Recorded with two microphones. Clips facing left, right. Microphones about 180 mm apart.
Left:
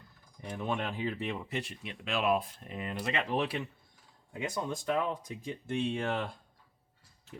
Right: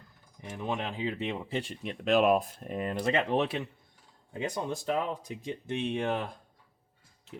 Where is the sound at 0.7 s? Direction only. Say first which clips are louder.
Right 1 dB; 15° right (ahead or behind).